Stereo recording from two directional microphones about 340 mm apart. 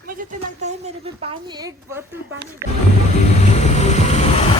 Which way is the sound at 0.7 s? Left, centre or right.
Centre.